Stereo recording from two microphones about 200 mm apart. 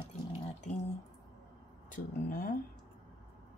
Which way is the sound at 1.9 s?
45° left (ahead or behind).